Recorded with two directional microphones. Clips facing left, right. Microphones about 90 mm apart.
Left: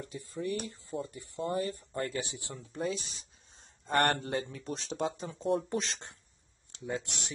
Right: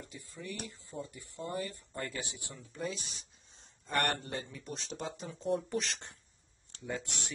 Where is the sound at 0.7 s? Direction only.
25° left (ahead or behind).